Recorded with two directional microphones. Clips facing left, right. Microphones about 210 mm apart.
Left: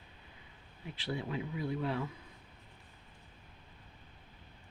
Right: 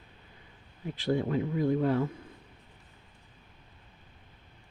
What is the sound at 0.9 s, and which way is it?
Speech, 45° right (ahead or behind).